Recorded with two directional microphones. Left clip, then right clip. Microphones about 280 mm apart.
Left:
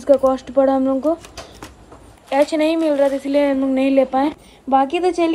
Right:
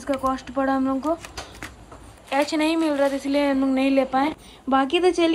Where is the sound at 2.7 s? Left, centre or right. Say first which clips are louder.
Left 5 dB; centre.